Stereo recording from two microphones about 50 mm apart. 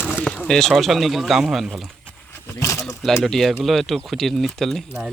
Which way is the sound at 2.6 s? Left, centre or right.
Left.